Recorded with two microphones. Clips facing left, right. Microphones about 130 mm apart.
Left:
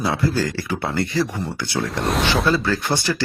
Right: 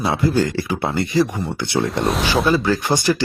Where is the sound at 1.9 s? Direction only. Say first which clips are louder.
Right 2 dB; centre (ahead or behind).